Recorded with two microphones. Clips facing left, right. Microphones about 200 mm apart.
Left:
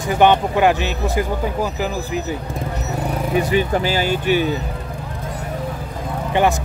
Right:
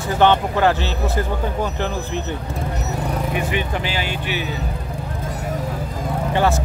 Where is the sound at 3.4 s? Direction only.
40° left (ahead or behind).